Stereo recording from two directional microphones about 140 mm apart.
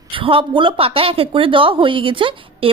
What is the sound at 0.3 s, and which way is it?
Speech, 40° right (ahead or behind).